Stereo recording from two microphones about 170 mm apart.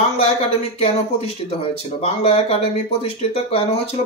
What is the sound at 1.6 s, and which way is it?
Speech, 35° left (ahead or behind).